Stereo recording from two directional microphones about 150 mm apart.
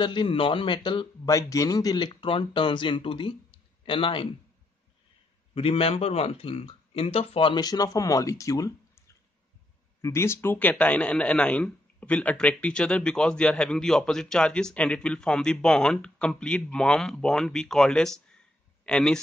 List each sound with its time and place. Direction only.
0.0 s speech: 35° left (ahead or behind)
1.3 s speech: 20° left (ahead or behind)
5.5 s a man's voice: 40° left (ahead or behind); by 19.1 s 5° left (ahead or behind)